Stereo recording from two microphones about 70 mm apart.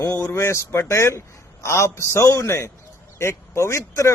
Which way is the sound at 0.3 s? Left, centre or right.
Left.